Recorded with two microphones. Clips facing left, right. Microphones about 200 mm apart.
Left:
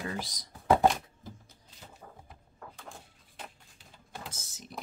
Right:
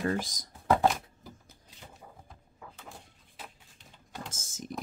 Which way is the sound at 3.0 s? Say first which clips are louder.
Left 1 dB; 5° left (ahead or behind).